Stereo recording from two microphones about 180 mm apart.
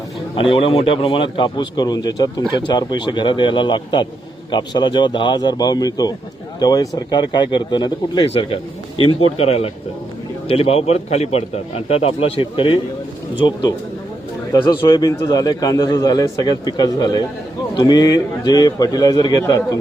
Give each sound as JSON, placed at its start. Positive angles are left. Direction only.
{"t": 0.3, "sound": "a man's voice", "side_deg": 30}